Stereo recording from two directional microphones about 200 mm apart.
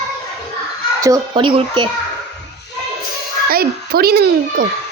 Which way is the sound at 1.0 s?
20° right (ahead or behind).